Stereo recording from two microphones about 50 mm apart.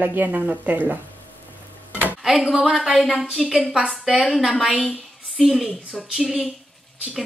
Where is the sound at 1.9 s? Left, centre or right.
Right.